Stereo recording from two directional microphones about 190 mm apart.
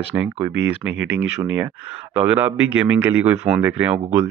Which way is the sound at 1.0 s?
90° right.